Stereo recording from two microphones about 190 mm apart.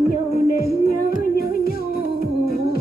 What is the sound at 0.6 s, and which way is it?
Music, 50° left (ahead or behind).